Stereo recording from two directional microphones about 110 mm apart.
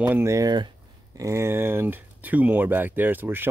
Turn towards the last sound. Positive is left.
turn(degrees=-20)  # may be behind; listen again after turning